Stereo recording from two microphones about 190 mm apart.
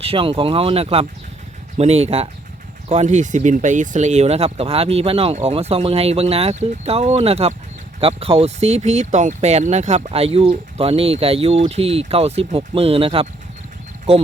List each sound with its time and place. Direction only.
0.0 s speech: 30° right (ahead or behind)